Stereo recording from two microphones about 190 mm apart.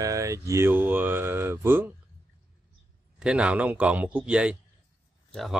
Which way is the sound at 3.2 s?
5° right (ahead or behind).